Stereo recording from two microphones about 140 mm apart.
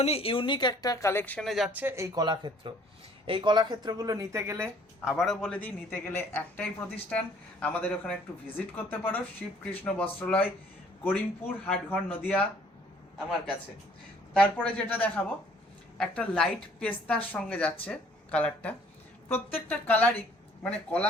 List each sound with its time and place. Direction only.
0.0 s speech: 45° left (ahead or behind); by 1.5 s 10° left (ahead or behind)
1.5 s speech: centre (ahead or behind)
1.7 s speech: 15° right (ahead or behind)
4.9 s a woman's voice: centre (ahead or behind)
14.3 s a woman's voice: 10° left (ahead or behind)